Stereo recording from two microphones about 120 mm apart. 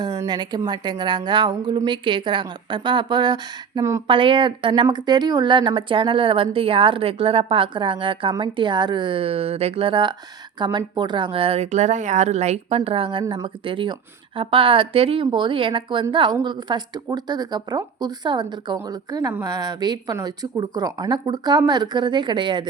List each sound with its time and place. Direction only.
0.0 s a woman's voice: 35° right (ahead or behind)
4.0 s a woman's voice: 45° right (ahead or behind)